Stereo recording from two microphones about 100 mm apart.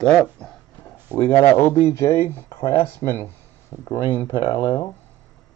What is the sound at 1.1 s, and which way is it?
Speech, 20° right (ahead or behind).